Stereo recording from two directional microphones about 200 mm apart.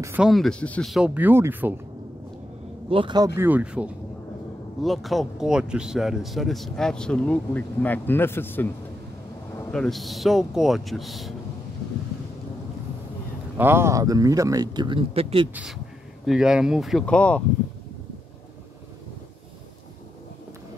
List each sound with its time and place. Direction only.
0.0 s speech: 5° right (ahead or behind)
2.9 s speech: 25° right (ahead or behind)
3.3 s speech: 10° right (ahead or behind); by 8.6 s 10° left (ahead or behind)
9.7 s speech: centre (ahead or behind)
13.6 s speech: 10° right (ahead or behind); by 15.5 s 30° right (ahead or behind)
16.3 s speech: 5° right (ahead or behind)